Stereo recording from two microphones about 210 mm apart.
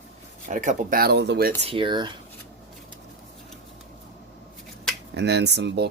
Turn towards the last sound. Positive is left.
turn(degrees=-55)  # may be behind; listen again after turning